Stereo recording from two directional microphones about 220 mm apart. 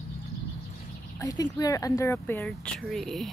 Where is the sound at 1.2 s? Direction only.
15° left (ahead or behind).